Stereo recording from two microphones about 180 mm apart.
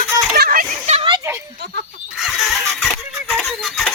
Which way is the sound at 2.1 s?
Centre (ahead or behind).